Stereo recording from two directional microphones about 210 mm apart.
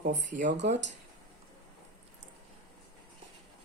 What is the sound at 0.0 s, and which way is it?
Speech, 35° right (ahead or behind).